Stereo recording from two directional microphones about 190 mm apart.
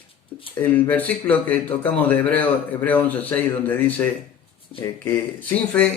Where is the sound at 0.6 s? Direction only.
10° left (ahead or behind).